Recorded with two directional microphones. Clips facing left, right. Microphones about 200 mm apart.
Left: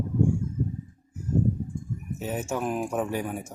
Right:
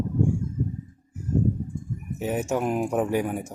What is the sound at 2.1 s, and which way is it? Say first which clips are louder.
Speech: right 5 dB; 15° right (ahead or behind).